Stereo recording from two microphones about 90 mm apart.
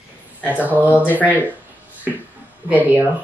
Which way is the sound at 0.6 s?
20° right (ahead or behind).